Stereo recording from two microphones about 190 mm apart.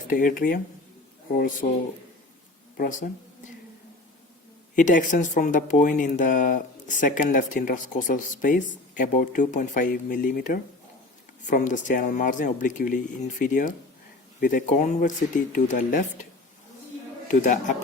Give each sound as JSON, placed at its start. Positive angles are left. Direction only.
{"t": 0.1, "sound": "speech", "side_deg": 45}
{"t": 2.7, "sound": "speech", "side_deg": 50}
{"t": 4.7, "sound": "speech", "side_deg": 40}
{"t": 17.3, "sound": "speech", "side_deg": 40}